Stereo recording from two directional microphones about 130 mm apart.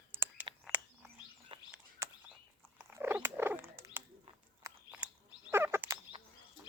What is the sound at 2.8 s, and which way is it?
Cat, 15° right (ahead or behind).